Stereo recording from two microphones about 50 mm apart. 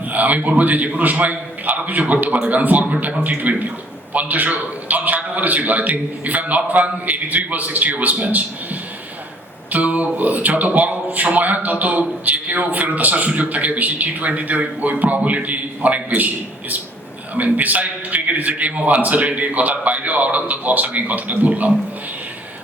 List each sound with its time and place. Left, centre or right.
0.0 s speech: right